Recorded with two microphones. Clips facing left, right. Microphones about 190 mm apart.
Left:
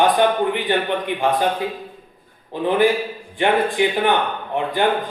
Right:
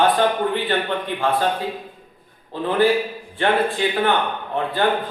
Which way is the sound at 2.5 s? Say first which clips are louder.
Left 1 dB; 15° left (ahead or behind).